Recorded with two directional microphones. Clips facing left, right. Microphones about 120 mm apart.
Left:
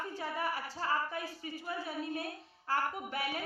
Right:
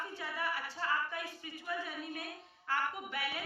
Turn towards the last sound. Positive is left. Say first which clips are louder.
# left 3 dB
turn(degrees=40)  # may be behind; listen again after turning